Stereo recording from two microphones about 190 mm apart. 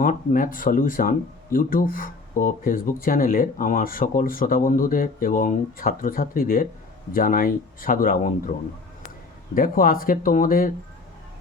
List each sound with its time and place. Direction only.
0.0 s speech: 45° left (ahead or behind)
9.6 s speech: 50° left (ahead or behind)